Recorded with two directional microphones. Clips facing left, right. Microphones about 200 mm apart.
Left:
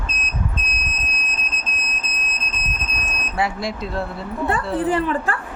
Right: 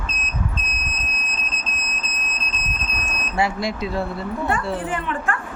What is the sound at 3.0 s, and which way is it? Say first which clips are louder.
Speech: right 1 dB; centre (ahead or behind).